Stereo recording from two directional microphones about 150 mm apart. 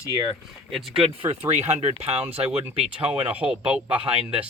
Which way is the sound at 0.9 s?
45° right (ahead or behind).